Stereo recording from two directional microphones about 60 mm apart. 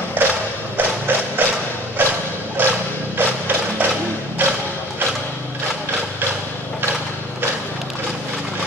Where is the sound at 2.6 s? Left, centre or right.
Right.